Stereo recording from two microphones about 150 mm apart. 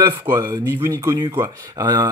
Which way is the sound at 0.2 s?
15° right (ahead or behind).